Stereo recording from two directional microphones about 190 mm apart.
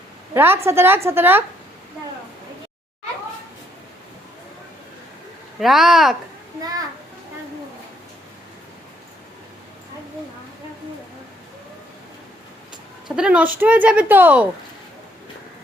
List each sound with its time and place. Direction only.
0.3 s speech: 10° right (ahead or behind)
5.5 s speech: centre (ahead or behind)
6.6 s a child's voice: 20° right (ahead or behind)
13.1 s speech: 5° right (ahead or behind)